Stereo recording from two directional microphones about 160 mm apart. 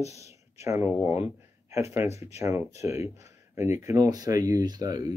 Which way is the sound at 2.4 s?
15° right (ahead or behind).